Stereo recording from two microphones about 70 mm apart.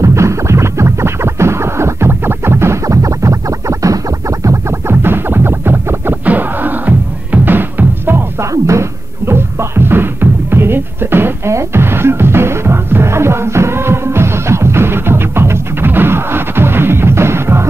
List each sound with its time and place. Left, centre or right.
0.0 s music: right
8.5 s music: right